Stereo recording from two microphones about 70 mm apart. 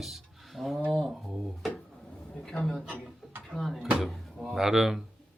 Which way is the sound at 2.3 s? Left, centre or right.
Centre.